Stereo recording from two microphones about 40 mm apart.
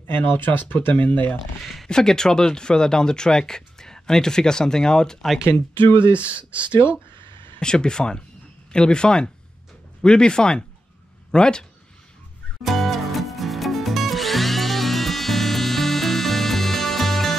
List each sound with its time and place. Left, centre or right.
0.3 s speech: left
1.6 s speech: centre
1.9 s speech: centre
6.1 s speech: right
6.7 s speech: left
7.6 s speech: centre
12.6 s drill: centre